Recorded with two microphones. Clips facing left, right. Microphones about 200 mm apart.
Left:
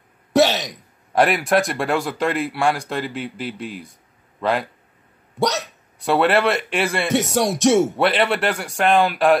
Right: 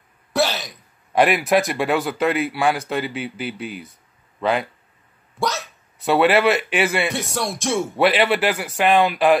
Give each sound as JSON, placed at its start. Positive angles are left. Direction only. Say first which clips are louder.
{"t": 0.3, "sound": "throat clearing", "louder": "left 5 dB", "side_deg": 40}
{"t": 1.1, "sound": "speech", "louder": "even", "side_deg": 0}
{"t": 5.9, "sound": "speech", "louder": "right 1 dB", "side_deg": 0}
{"t": 7.5, "sound": "speech", "louder": "left 8 dB", "side_deg": 70}
{"t": 7.9, "sound": "speech", "louder": "right 1 dB", "side_deg": 0}